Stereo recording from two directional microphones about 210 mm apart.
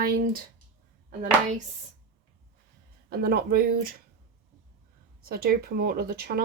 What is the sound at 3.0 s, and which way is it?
Speech, 50° right (ahead or behind).